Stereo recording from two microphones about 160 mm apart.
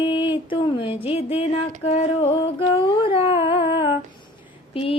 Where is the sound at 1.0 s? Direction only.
35° left (ahead or behind).